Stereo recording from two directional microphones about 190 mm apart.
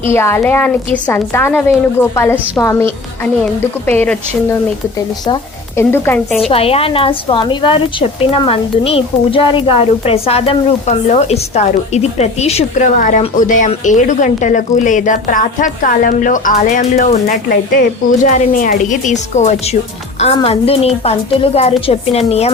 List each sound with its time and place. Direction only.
0.1 s a woman's voice: 15° left (ahead or behind)
3.8 s a woman's voice: 10° left (ahead or behind)
5.2 s a woman's voice: 15° left (ahead or behind)
6.5 s a woman's voice: 30° left (ahead or behind)